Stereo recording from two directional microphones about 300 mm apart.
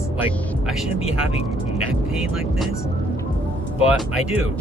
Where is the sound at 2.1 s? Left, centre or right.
Centre.